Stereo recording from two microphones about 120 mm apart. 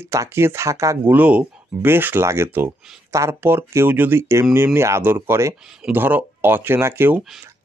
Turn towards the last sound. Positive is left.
turn(degrees=-20)  # may be behind; listen again after turning